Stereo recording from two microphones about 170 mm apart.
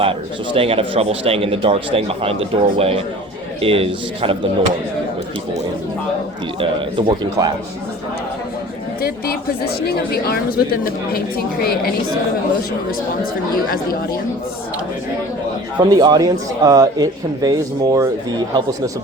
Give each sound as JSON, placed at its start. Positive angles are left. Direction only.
{"t": 0.0, "sound": "speech", "side_deg": -30}
{"t": 7.1, "sound": "speech", "side_deg": -25}
{"t": 9.0, "sound": "a woman's voice", "side_deg": 65}
{"t": 15.8, "sound": "speech", "side_deg": -25}